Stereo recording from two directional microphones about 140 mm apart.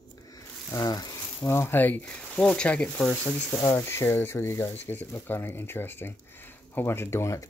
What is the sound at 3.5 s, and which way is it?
Speech, 30° left (ahead or behind).